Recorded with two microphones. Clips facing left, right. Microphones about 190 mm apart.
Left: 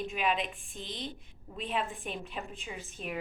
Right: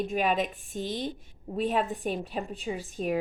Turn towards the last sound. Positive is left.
turn(degrees=-40)  # may be behind; listen again after turning